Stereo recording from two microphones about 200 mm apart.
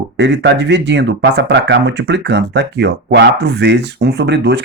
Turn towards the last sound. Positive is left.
turn(degrees=-60)  # may be behind; listen again after turning